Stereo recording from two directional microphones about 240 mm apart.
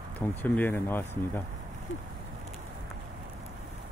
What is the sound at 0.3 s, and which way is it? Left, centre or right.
Speech, centre.